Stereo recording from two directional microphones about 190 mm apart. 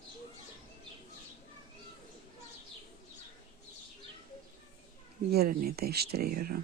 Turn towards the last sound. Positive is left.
turn(degrees=-50)  # may be behind; listen again after turning